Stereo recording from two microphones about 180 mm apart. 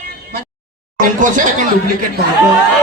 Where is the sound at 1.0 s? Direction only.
45° right (ahead or behind).